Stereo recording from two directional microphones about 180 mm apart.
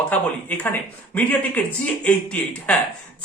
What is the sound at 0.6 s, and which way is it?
A man's voice, 10° left (ahead or behind).